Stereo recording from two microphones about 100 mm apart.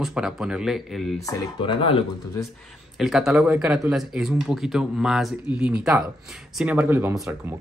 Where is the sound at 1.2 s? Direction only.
35° left (ahead or behind).